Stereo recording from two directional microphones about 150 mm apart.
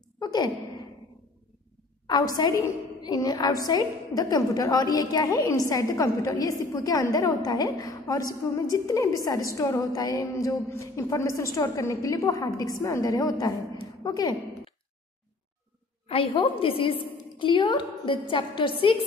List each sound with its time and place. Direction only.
0.2 s sigh: 25° left (ahead or behind)
2.0 s a woman's voice: 25° left (ahead or behind)
16.1 s a woman's voice: 35° left (ahead or behind)